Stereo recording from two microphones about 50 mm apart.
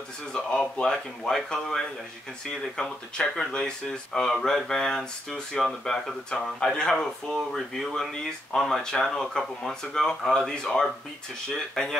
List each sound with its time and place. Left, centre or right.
0.3 s speech: centre